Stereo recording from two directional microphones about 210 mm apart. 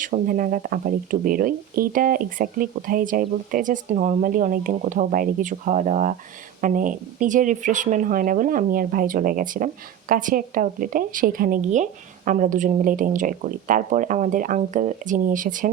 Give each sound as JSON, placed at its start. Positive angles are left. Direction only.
{"t": 0.0, "sound": "speech", "side_deg": -40}